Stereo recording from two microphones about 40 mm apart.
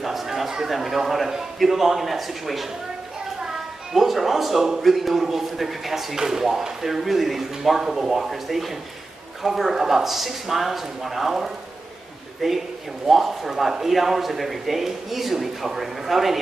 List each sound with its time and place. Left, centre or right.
0.0 s a man's voice: centre